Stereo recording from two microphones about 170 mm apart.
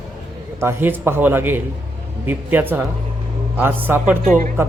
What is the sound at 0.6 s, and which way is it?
Speech, 15° right (ahead or behind).